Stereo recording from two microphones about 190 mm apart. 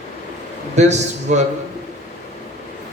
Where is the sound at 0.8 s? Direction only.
35° right (ahead or behind).